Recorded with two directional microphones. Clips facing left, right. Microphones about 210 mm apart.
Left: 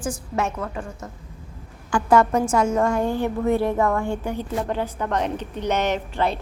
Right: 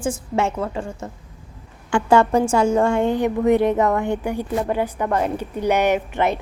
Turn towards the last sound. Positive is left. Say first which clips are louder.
# right 4 dB
turn(degrees=-20)  # may be behind; listen again after turning